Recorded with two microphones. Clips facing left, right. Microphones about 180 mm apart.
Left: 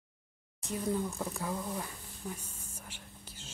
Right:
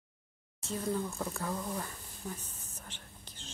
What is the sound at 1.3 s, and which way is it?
Whispering, 10° left (ahead or behind).